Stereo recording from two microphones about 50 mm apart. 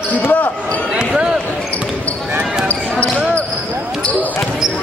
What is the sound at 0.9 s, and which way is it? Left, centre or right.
Speech, centre.